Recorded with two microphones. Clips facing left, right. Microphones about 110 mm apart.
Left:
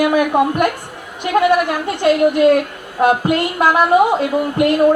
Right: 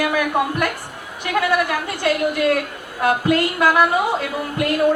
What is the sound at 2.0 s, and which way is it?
A man's voice, 25° left (ahead or behind).